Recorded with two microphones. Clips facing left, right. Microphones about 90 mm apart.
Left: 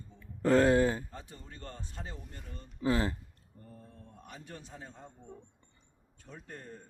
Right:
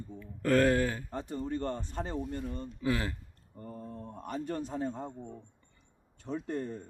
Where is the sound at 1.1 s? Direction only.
60° right (ahead or behind).